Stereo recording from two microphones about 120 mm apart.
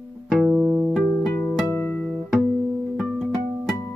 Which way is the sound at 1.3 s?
15° left (ahead or behind).